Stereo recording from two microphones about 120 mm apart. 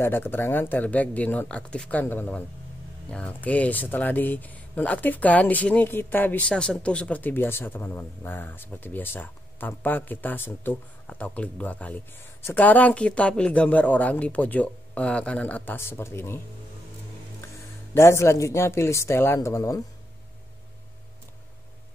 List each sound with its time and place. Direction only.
0.0 s speech: 20° left (ahead or behind)
17.9 s speech: 20° left (ahead or behind)